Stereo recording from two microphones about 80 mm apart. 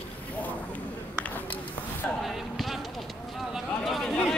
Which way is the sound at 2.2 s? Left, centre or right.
Centre.